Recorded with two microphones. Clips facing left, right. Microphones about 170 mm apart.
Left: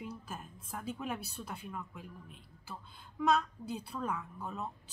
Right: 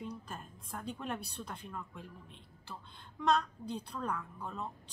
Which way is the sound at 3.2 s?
5° left (ahead or behind).